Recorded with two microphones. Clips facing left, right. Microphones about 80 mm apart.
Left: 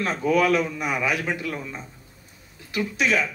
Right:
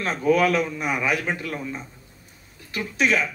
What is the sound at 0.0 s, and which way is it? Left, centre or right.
A man's voice, right.